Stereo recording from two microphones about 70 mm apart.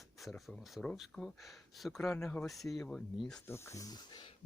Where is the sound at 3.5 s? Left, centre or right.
Left.